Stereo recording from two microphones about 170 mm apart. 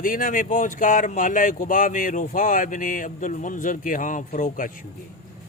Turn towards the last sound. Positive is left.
turn(degrees=50)  # may be behind; listen again after turning